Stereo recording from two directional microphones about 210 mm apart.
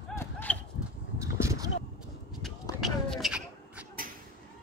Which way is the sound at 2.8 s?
Centre (ahead or behind).